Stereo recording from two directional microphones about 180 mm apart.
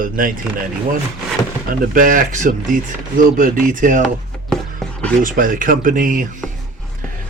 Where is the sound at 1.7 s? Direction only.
50° right (ahead or behind).